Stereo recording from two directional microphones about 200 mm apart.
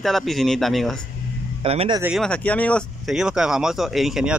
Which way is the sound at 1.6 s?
25° right (ahead or behind).